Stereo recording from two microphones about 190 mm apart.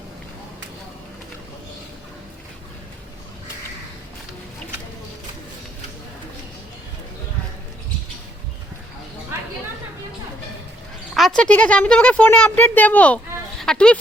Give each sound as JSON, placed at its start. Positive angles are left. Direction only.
{"t": 11.1, "sound": "speech", "side_deg": 0}